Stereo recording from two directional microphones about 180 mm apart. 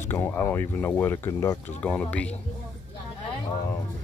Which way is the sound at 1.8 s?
5° left (ahead or behind).